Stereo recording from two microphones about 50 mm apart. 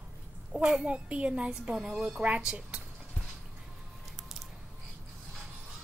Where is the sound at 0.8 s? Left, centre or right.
Right.